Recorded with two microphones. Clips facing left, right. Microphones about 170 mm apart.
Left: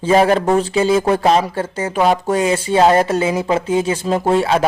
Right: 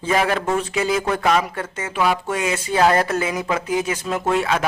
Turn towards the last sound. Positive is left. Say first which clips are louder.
# left 5 dB
turn(degrees=30)  # may be behind; listen again after turning